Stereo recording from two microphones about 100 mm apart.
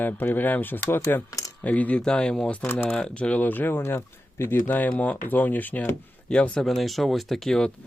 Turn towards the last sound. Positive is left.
turn(degrees=5)  # may be behind; listen again after turning